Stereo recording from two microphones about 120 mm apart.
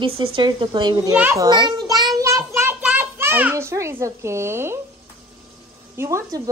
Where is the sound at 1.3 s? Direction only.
35° right (ahead or behind).